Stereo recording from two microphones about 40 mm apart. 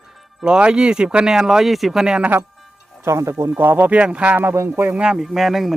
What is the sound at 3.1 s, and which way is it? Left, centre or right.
Speech, right.